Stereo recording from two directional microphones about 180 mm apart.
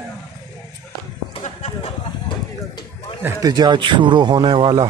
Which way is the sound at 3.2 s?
20° right (ahead or behind).